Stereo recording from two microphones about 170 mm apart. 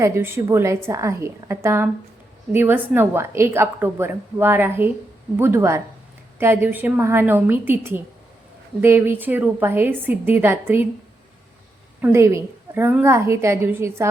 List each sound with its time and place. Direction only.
0.0 s a woman's voice: 15° right (ahead or behind)
12.0 s a woman's voice: 15° right (ahead or behind)